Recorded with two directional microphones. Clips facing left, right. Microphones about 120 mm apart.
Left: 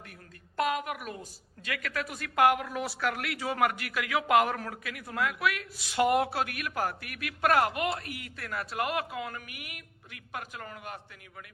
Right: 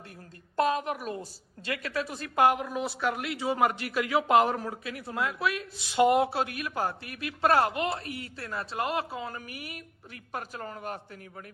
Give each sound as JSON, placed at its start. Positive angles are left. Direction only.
{"t": 0.5, "sound": "a woman's voice", "side_deg": -30}